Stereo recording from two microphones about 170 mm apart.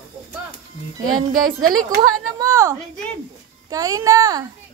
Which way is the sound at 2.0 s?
20° right (ahead or behind).